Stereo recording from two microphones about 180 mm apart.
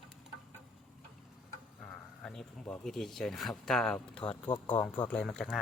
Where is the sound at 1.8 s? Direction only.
5° left (ahead or behind).